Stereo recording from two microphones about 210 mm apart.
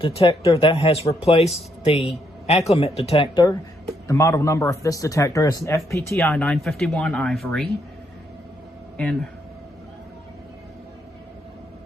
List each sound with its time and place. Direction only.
0.0 s a man's voice: 25° left (ahead or behind); by 7.7 s 5° left (ahead or behind)
9.0 s speech: 5° left (ahead or behind)